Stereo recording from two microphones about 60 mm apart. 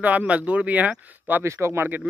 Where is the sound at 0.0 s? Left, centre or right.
Right.